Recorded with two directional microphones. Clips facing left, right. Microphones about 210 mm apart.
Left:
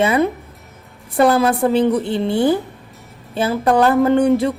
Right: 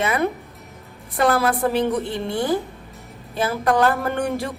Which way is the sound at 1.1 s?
25° left (ahead or behind).